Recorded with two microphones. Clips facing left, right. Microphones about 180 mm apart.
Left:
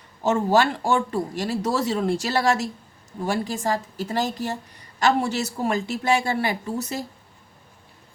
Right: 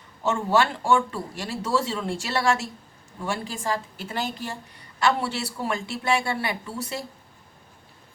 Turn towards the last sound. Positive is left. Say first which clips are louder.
# left 4 dB
turn(degrees=40)  # may be behind; listen again after turning